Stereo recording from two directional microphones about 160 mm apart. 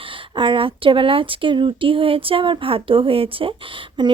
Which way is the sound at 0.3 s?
30° right (ahead or behind).